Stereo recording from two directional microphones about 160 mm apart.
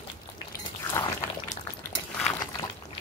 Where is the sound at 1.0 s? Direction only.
15° left (ahead or behind).